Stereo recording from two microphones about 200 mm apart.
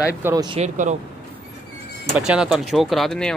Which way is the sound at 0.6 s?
35° right (ahead or behind).